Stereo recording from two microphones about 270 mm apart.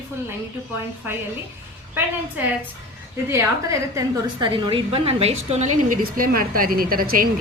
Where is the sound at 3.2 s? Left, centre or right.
Centre.